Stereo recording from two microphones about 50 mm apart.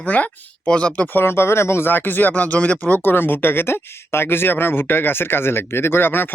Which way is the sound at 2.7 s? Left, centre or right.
Left.